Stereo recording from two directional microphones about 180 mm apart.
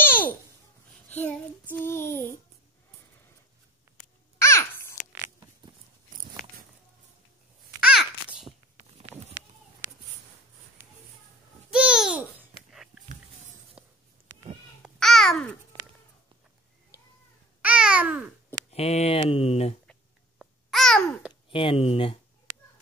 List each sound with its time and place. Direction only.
0.0 s babbling: 10° left (ahead or behind)
1.0 s child singing: 10° left (ahead or behind)
4.4 s babbling: 15° left (ahead or behind)
7.8 s babbling: 5° right (ahead or behind)
11.7 s babbling: 5° right (ahead or behind)
13.8 s writing: 5° right (ahead or behind)
14.8 s babbling: centre (ahead or behind)
17.6 s babbling: 5° right (ahead or behind)
18.7 s a sound: 35° left (ahead or behind)
19.9 s babbling: centre (ahead or behind)
21.5 s a sound: 30° left (ahead or behind)